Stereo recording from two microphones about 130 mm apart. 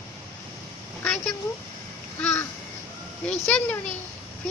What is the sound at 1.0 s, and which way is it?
A child's voice, 5° left (ahead or behind).